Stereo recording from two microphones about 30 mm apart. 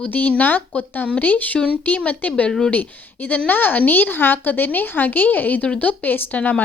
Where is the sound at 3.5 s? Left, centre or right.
Left.